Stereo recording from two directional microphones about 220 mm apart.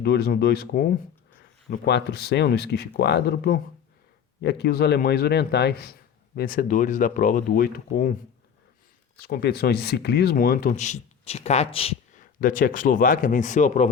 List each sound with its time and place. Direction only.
0.0 s a man's voice: 45° left (ahead or behind)
9.2 s speech: 45° left (ahead or behind)